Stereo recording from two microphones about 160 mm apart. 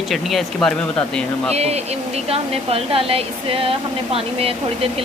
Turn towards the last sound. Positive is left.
turn(degrees=-35)  # may be behind; listen again after turning